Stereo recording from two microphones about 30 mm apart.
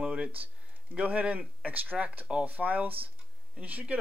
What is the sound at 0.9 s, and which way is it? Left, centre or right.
Speech, right.